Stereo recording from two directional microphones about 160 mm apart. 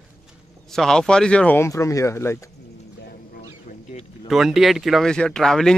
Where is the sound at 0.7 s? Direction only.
5° left (ahead or behind).